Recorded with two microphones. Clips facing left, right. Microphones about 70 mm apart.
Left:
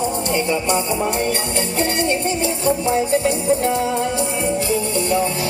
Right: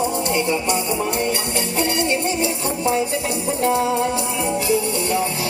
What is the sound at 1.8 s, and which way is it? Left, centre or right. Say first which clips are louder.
Music: left 1 dB; left.